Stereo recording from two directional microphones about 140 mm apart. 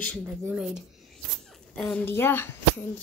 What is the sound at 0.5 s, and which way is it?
A woman's voice, 5° right (ahead or behind).